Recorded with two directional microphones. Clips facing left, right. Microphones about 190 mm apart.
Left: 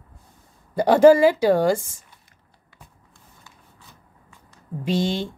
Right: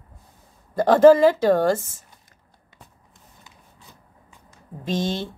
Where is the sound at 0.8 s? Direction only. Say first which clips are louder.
Even; 10° left (ahead or behind).